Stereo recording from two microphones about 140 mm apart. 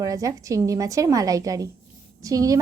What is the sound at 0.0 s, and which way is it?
A woman's voice, 25° right (ahead or behind).